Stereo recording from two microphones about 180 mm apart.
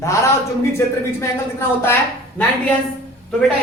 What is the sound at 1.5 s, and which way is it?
Speech, 15° left (ahead or behind).